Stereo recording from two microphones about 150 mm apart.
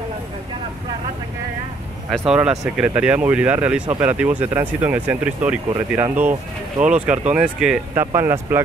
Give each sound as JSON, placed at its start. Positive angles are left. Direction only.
{"t": 2.0, "sound": "speech", "side_deg": -5}
{"t": 7.9, "sound": "speech", "side_deg": -15}